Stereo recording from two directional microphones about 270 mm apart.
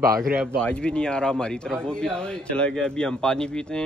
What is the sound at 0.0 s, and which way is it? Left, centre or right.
Speech, right.